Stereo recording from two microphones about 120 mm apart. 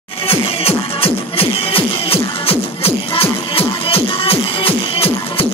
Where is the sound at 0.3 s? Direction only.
55° left (ahead or behind).